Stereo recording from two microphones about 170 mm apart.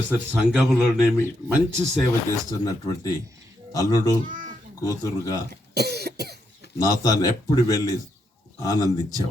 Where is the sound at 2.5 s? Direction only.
20° left (ahead or behind).